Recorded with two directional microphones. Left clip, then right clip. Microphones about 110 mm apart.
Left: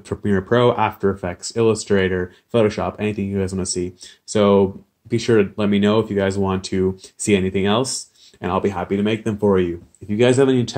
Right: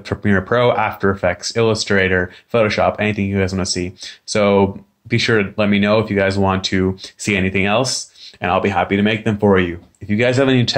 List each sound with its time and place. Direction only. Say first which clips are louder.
0.5 s speech: right 1 dB; 45° left (ahead or behind); by 9.8 s 60° left (ahead or behind)
10.0 s speech: even; 35° left (ahead or behind)